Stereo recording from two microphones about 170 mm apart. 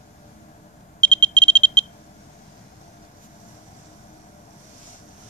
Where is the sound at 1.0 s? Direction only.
10° left (ahead or behind).